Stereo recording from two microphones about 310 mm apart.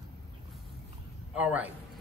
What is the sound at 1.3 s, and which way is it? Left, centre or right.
Speech, centre.